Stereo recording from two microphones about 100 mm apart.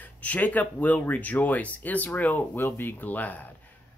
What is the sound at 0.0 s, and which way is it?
Speech, 15° left (ahead or behind).